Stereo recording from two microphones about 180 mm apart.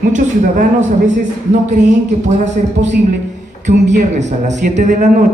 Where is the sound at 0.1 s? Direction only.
45° right (ahead or behind).